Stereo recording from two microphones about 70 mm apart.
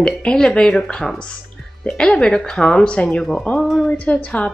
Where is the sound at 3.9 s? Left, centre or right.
Centre.